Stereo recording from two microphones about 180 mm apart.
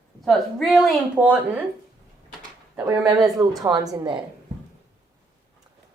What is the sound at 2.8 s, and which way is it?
A woman's voice, 20° right (ahead or behind).